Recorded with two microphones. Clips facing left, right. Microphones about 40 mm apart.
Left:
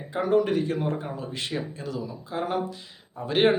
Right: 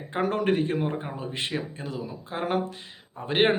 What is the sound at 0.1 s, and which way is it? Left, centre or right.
Speech, right.